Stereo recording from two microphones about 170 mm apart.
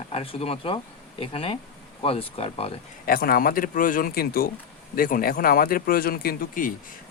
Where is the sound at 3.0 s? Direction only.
60° left (ahead or behind).